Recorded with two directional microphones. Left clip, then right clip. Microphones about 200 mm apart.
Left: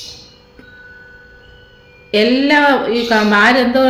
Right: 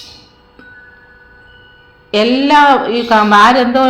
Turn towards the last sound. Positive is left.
turn(degrees=10)  # may be behind; listen again after turning